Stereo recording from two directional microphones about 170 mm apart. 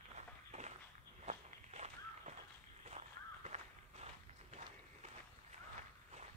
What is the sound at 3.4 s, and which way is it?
Walk, 40° right (ahead or behind).